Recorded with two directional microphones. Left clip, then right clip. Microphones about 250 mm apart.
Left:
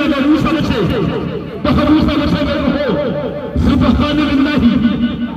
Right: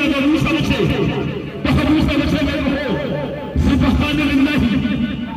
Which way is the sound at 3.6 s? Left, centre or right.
Left.